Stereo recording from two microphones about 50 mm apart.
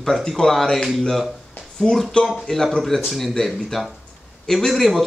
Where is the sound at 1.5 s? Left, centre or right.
Centre.